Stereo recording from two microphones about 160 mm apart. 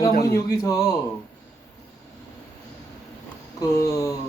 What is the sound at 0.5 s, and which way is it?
Speech, 20° left (ahead or behind).